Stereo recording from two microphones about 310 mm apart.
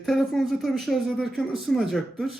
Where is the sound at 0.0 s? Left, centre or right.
Centre.